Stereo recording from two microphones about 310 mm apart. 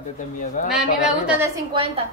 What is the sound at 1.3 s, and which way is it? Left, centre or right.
Speech, centre.